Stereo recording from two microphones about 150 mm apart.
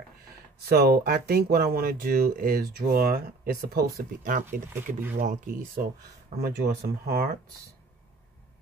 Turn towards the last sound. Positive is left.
turn(degrees=-90)